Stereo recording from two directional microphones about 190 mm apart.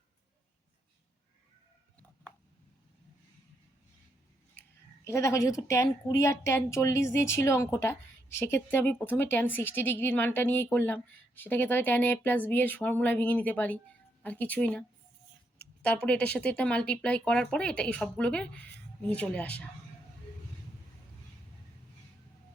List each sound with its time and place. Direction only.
4.6 s scissors: 10° left (ahead or behind)
5.0 s a woman's voice: 15° left (ahead or behind)